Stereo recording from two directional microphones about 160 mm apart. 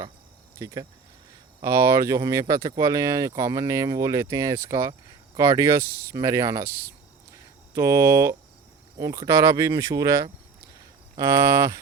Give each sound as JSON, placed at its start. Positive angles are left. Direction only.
{"t": 0.6, "sound": "speech", "side_deg": -20}
{"t": 7.7, "sound": "speech", "side_deg": -20}